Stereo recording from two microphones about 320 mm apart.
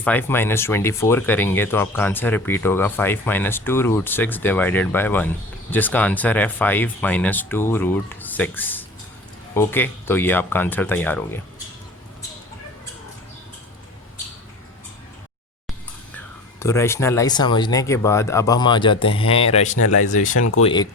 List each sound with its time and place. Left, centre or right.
0.0 s speech: centre
16.1 s speech: centre
19.7 s speech: left
20.1 s speech: left